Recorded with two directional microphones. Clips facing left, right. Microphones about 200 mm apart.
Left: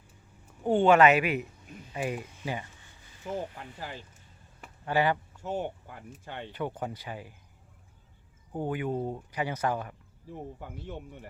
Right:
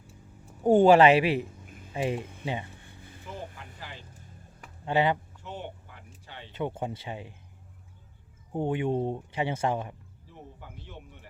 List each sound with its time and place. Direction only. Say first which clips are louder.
0.6 s speech: right 3 dB; 40° right (ahead or behind); by 2.6 s 25° right (ahead or behind)
2.7 s a sound: right 8 dB; 55° right (ahead or behind)
3.2 s speech: left 6 dB; 45° left (ahead or behind)
4.9 s speech: right 1 dB; 20° right (ahead or behind)
5.4 s speech: left 7 dB; 45° left (ahead or behind)
6.5 s speech: right 3 dB; 25° right (ahead or behind)
8.5 s speech: right 3 dB; 25° right (ahead or behind)
10.2 s speech: left 7 dB; 50° left (ahead or behind)